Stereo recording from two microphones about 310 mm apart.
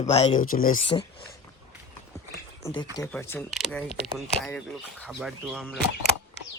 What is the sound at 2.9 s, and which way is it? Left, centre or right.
Speech, centre.